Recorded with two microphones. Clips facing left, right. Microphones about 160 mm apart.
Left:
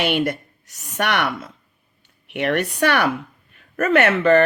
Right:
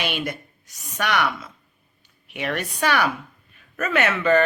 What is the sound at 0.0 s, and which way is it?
A woman's voice, 60° left (ahead or behind).